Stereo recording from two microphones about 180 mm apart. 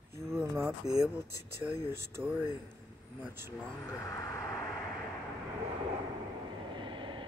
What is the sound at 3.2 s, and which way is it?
Speech, 10° right (ahead or behind).